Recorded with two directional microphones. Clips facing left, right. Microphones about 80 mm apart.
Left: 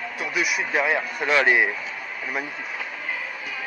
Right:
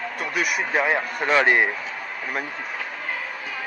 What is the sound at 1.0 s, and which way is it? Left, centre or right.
Speech, right.